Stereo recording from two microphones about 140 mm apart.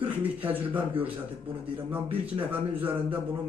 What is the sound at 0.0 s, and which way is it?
A man's voice, 15° right (ahead or behind).